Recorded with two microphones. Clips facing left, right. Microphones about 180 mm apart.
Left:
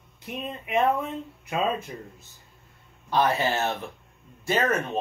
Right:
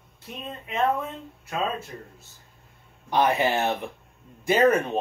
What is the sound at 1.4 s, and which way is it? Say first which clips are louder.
Speech: left 2 dB; 15° left (ahead or behind).